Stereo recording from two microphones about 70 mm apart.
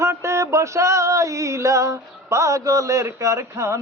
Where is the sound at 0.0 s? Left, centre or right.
Right.